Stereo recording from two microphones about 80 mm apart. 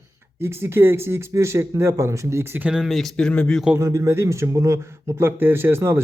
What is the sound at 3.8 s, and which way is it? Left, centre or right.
Speech, right.